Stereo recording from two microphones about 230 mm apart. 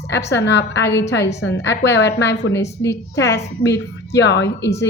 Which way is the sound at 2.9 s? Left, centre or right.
Left.